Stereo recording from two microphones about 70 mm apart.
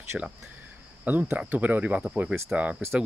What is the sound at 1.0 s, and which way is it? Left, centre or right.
Cricket, right.